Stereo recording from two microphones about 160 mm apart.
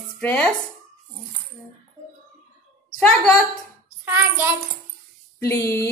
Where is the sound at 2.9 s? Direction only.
5° left (ahead or behind).